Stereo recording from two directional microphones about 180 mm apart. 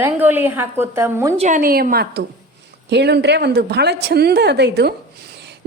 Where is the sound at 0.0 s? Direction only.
10° right (ahead or behind).